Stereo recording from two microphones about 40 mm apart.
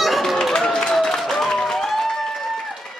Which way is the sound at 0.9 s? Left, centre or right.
Centre.